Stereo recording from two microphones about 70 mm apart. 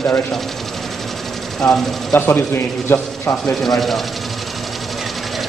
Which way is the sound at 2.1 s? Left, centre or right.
Left.